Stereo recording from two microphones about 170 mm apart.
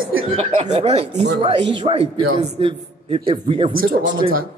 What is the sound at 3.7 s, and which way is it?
Speech, 90° right.